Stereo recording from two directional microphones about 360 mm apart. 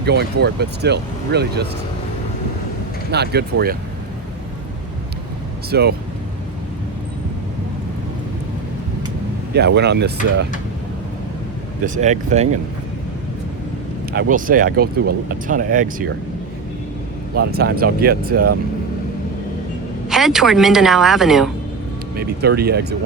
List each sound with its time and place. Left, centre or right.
0.0 s speech: right
3.1 s speech: right
5.7 s speech: right
9.6 s speech: right
11.9 s speech: centre
14.1 s speech: right
17.3 s speech: right
20.1 s a woman's voice: centre
22.1 s speech: right